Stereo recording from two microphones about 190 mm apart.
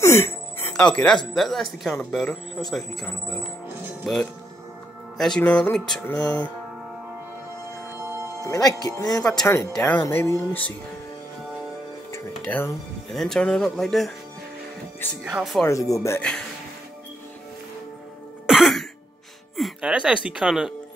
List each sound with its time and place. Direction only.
0.0 s music: 15° left (ahead or behind)
1.3 s speech: centre (ahead or behind)
8.5 s speech: 20° left (ahead or behind)
9.2 s speech: 5° left (ahead or behind)
12.1 s speech: 10° left (ahead or behind)
15.2 s speech: centre (ahead or behind)
15.6 s speech: 15° left (ahead or behind)
18.5 s throat clearing: centre (ahead or behind)
19.5 s music: centre (ahead or behind)
20.2 s speech: 5° right (ahead or behind)